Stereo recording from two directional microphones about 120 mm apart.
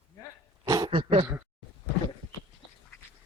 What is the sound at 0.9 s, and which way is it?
Speech, 45° right (ahead or behind).